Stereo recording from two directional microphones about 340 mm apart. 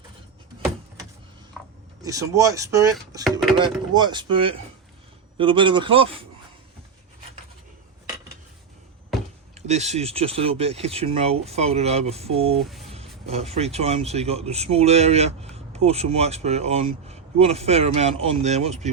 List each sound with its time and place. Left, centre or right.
1.6 s a sound: centre
2.0 s speech: centre
9.6 s speech: centre
12.5 s speech: centre
12.9 s speech: centre